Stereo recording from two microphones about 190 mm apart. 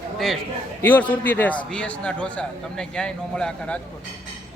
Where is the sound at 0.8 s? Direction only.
10° left (ahead or behind).